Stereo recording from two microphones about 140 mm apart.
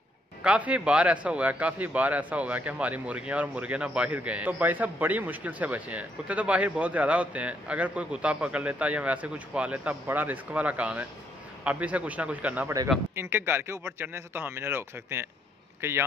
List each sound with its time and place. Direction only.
0.4 s a man's voice: 10° right (ahead or behind)